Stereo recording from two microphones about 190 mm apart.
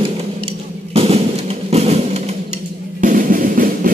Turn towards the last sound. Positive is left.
turn(degrees=-45)  # may be behind; listen again after turning